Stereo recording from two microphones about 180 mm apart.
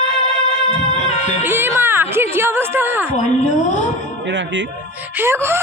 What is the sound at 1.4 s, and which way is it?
Speech, 10° right (ahead or behind).